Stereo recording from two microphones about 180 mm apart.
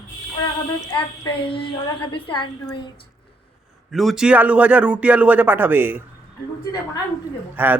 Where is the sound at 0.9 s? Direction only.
30° left (ahead or behind).